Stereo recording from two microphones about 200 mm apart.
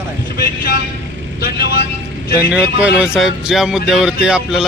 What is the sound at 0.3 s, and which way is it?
Vehicle, 50° left (ahead or behind).